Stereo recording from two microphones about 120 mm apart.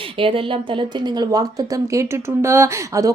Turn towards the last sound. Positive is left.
turn(degrees=-25)  # may be behind; listen again after turning